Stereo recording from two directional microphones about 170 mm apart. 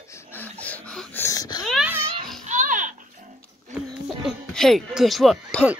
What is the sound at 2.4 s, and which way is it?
Music, 50° right (ahead or behind).